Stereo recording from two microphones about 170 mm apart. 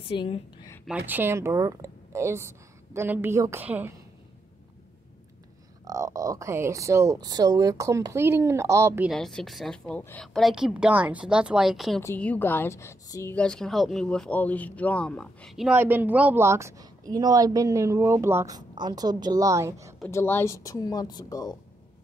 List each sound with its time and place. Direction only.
0.1 s a woman's voice: 30° left (ahead or behind)
0.8 s a woman's voice: 10° right (ahead or behind)
5.9 s a woman's voice: 20° right (ahead or behind)
9.1 s speech: centre (ahead or behind)
12.0 s a woman's voice: 10° left (ahead or behind); by 20.0 s 15° right (ahead or behind)
20.1 s speech: 15° left (ahead or behind)